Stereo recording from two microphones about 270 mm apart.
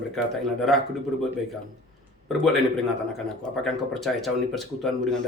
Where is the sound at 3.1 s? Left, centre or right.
Centre.